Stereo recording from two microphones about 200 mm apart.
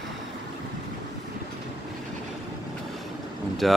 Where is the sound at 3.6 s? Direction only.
Centre (ahead or behind).